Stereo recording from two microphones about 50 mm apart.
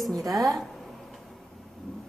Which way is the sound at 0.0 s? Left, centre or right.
Centre.